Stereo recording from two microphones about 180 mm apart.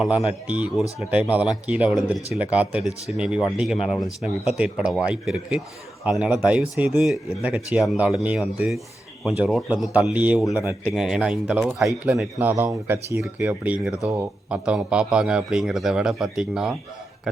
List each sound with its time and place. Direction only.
0.3 s speech: 5° right (ahead or behind)
10.6 s speech: 15° left (ahead or behind)
10.9 s speech: 5° right (ahead or behind)